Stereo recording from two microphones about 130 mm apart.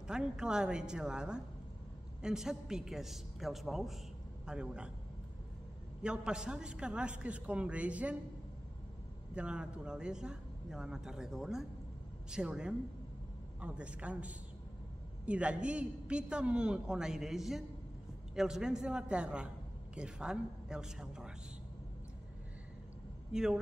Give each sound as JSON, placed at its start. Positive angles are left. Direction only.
{"t": 0.0, "sound": "a man's voice", "side_deg": -5}
{"t": 6.0, "sound": "a man's voice", "side_deg": -5}
{"t": 9.3, "sound": "a man's voice", "side_deg": -5}
{"t": 23.3, "sound": "a man's voice", "side_deg": -5}